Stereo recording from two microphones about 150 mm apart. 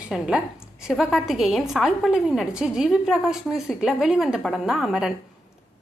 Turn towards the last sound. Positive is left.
turn(degrees=0)  # may be behind; listen again after turning